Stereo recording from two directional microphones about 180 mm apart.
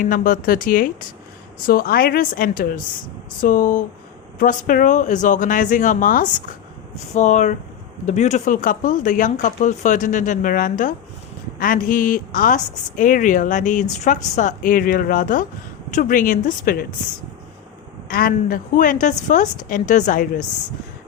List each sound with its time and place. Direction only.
0.0 s a woman's voice: 50° left (ahead or behind)
18.1 s a woman's voice: 50° left (ahead or behind)